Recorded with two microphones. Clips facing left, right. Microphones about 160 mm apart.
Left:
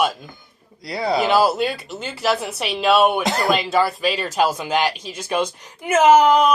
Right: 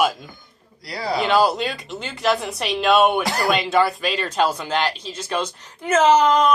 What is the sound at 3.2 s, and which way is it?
Speech, 20° left (ahead or behind).